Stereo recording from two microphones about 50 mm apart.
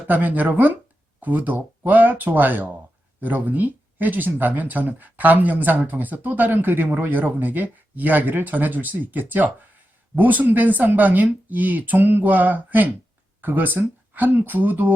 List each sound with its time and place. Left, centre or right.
0.1 s speech: right